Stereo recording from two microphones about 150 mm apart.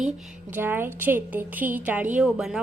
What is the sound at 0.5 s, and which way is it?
Speech, 15° right (ahead or behind).